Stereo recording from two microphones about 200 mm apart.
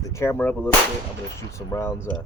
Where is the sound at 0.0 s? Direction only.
15° left (ahead or behind).